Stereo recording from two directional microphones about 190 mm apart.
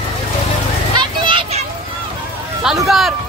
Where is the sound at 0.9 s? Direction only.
25° right (ahead or behind).